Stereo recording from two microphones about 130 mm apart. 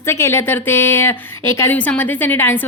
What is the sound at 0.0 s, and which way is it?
A woman's voice, 20° left (ahead or behind).